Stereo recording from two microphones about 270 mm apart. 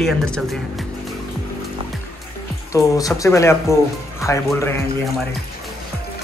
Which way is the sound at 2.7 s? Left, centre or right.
Centre.